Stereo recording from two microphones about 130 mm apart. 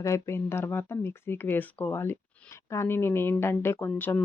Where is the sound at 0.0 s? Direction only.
20° left (ahead or behind).